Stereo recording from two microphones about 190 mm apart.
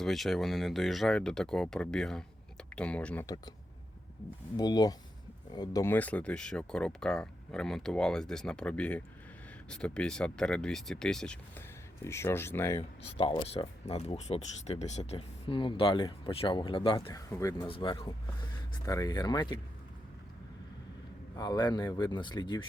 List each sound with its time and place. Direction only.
0.0 s speech: centre (ahead or behind)
3.2 s speech: 20° left (ahead or behind)
4.5 s speech: 20° left (ahead or behind)
13.0 s speech: 30° left (ahead or behind)
17.7 s speech: 25° left (ahead or behind)
21.3 s speech: 20° left (ahead or behind)